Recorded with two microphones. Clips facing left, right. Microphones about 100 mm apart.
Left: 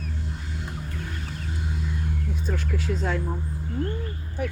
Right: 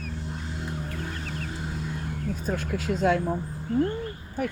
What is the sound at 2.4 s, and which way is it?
Speech, 50° right (ahead or behind).